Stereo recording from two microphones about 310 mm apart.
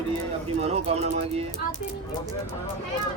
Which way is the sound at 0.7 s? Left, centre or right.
Centre.